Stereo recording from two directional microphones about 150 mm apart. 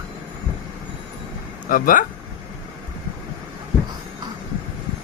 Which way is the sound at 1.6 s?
65° left (ahead or behind).